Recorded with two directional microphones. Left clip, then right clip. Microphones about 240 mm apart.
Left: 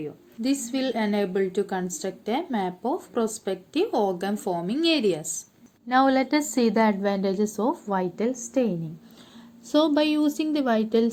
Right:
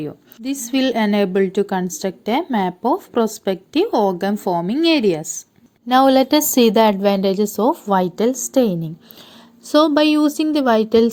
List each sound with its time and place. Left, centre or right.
0.0 s a woman's voice: right
5.9 s a woman's voice: right